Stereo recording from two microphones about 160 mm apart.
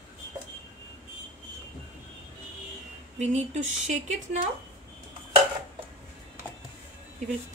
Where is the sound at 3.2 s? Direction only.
45° right (ahead or behind).